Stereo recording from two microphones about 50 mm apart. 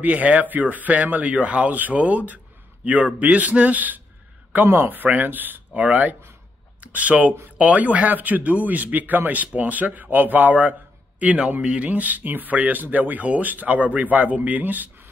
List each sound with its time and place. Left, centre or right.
0.0 s speech: right